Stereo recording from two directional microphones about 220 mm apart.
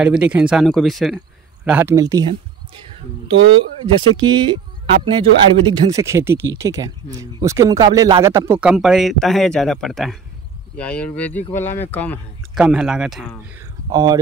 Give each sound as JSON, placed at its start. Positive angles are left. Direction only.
{"t": 0.0, "sound": "speech", "side_deg": -5}